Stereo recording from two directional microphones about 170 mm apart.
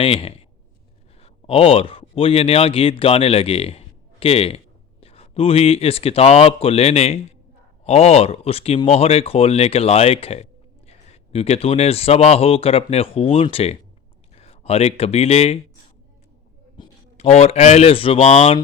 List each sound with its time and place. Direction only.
0.0 s speech: 35° left (ahead or behind)
16.8 s a sound: 25° left (ahead or behind)
17.2 s speech: 40° left (ahead or behind)